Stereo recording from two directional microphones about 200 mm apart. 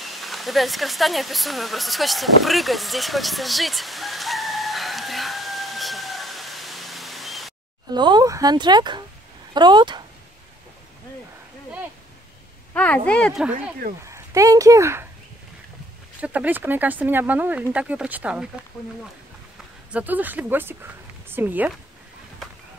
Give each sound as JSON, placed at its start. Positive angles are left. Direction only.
{"t": 0.0, "sound": "a sound", "side_deg": 0}
{"t": 7.9, "sound": "speech", "side_deg": -20}
{"t": 12.7, "sound": "speech", "side_deg": 5}
{"t": 14.0, "sound": "speech", "side_deg": -15}
{"t": 16.2, "sound": "speech", "side_deg": -10}
{"t": 19.9, "sound": "speech", "side_deg": -10}